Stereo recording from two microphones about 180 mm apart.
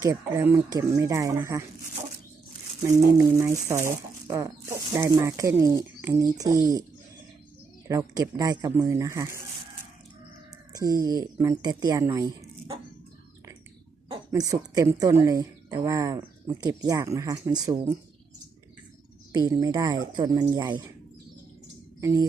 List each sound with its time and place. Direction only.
0.0 s speech: 15° right (ahead or behind)
3.3 s speech: 15° right (ahead or behind)
7.9 s speech: 20° right (ahead or behind)
10.7 s speech: 20° right (ahead or behind)
14.1 s a woman's voice: 20° right (ahead or behind)
19.3 s a woman's voice: 20° right (ahead or behind)
22.0 s a woman's voice: 20° right (ahead or behind)